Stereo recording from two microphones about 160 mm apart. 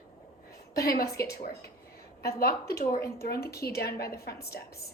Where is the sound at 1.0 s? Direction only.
20° left (ahead or behind).